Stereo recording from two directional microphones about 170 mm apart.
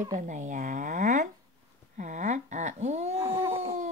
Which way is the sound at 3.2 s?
15° right (ahead or behind).